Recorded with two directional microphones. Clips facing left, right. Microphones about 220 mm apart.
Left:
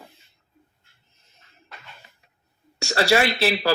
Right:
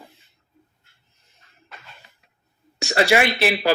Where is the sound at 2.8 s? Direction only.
15° right (ahead or behind).